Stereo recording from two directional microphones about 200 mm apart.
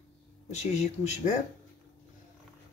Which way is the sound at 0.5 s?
35° left (ahead or behind).